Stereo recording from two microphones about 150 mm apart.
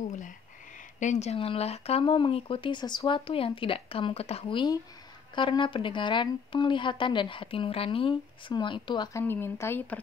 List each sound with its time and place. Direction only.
0.9 s speech: 50° left (ahead or behind); by 9.1 s 30° left (ahead or behind)
9.1 s speech: 15° left (ahead or behind)